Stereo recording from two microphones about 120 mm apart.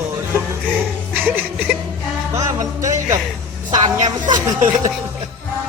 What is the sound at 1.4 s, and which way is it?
Speech, 15° right (ahead or behind).